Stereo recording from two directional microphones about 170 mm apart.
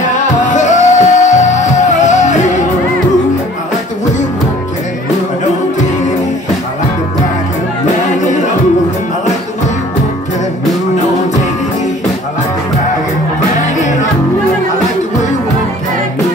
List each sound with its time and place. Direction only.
0.0 s music: 45° left (ahead or behind)
8.1 s music: 45° left (ahead or behind)
13.6 s music: 45° left (ahead or behind)